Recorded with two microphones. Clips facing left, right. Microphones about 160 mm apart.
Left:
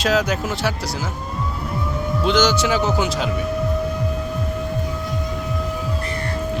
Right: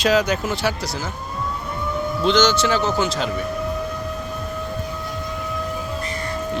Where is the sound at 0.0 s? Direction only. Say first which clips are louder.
Right 1 dB; 5° left (ahead or behind).